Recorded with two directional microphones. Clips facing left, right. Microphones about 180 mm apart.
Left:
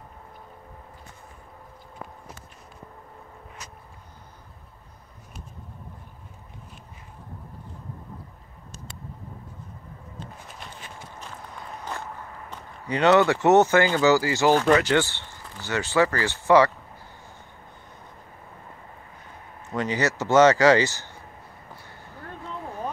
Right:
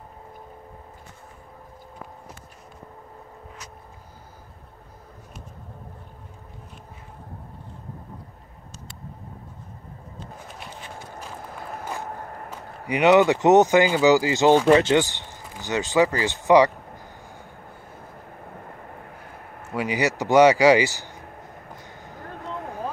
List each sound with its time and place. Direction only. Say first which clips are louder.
11.1 s run: right 4 dB; 5° right (ahead or behind)
12.1 s a sound: right 4 dB; 50° right (ahead or behind)
12.4 s speech: right 1 dB; 15° right (ahead or behind)
18.4 s vehicle: right 6 dB; 60° right (ahead or behind)
19.7 s speech: right 1 dB; 10° right (ahead or behind)
21.7 s a sound: right 4 dB; 15° right (ahead or behind)